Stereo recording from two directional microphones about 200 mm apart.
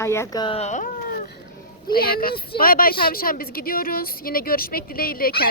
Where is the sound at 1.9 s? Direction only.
50° left (ahead or behind).